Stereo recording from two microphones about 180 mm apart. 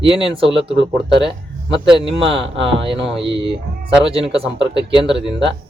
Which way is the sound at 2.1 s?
30° right (ahead or behind).